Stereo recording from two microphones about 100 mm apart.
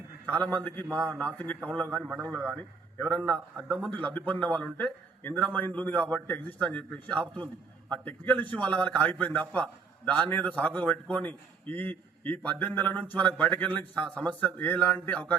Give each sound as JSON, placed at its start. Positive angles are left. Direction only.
{"t": 0.3, "sound": "a man's voice", "side_deg": 15}